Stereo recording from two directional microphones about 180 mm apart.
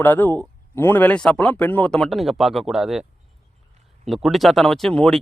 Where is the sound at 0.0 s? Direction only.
10° left (ahead or behind).